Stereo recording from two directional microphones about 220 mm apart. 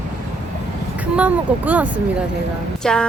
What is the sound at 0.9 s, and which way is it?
Speech, 5° right (ahead or behind).